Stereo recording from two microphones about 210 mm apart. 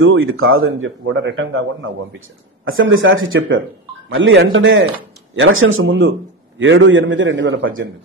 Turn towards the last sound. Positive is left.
turn(degrees=-60)  # may be behind; listen again after turning